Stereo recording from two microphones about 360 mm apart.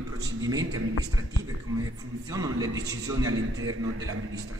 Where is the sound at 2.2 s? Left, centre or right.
Centre.